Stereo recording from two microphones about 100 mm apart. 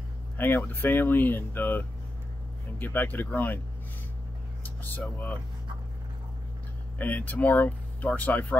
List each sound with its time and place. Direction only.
0.4 s speech: 20° left (ahead or behind)
4.6 s speech: 20° left (ahead or behind)
7.0 s speech: 15° left (ahead or behind)